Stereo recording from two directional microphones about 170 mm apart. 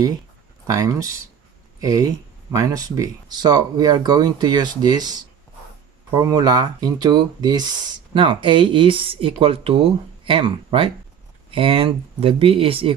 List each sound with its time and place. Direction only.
0.7 s speech: 20° right (ahead or behind)